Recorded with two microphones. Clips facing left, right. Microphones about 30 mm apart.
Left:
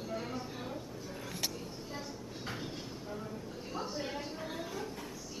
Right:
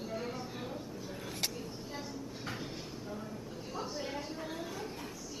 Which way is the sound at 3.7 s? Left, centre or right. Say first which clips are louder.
Left 1 dB; centre.